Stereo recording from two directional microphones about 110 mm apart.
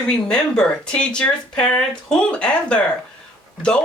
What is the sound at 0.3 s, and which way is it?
Speech, 10° left (ahead or behind).